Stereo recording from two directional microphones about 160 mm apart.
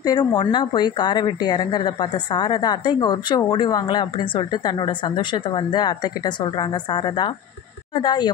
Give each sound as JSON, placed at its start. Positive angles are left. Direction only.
{"t": 0.0, "sound": "a woman's voice", "side_deg": 25}